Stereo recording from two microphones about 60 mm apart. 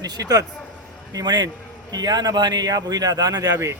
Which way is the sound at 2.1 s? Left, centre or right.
Right.